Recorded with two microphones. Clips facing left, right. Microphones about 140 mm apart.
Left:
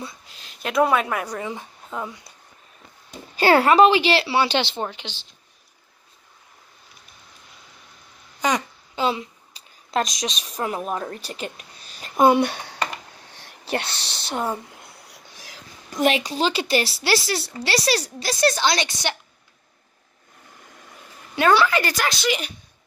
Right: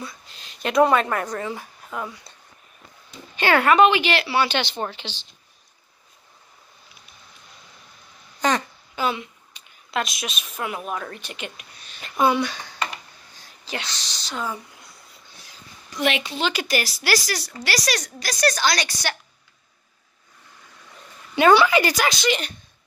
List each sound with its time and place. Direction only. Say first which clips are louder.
0.3 s speech: right 4 dB; centre (ahead or behind); by 2.3 s 20° left (ahead or behind)
3.3 s speech: left 2 dB; 35° left (ahead or behind)
4.7 s speech: even; 10° left (ahead or behind)
8.4 s a sound: right 1 dB; 10° left (ahead or behind)
8.9 s speech: left 2 dB; 30° left (ahead or behind); by 12.8 s 55° left (ahead or behind)
13.3 s a sound: left 7 dB; 65° left (ahead or behind); by 15.6 s 90° left
15.9 s a woman's voice: left 3 dB; 40° left (ahead or behind); by 19.1 s 25° left (ahead or behind)
21.5 s a woman's voice: right 2 dB; 10° right (ahead or behind)
22.2 s speech: right 1 dB; 10° left (ahead or behind)